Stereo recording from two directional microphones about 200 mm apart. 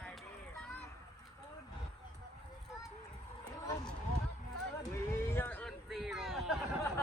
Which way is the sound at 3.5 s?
15° left (ahead or behind).